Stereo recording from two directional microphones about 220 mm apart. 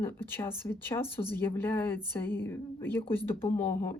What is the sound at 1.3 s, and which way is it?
A woman's voice, 10° left (ahead or behind).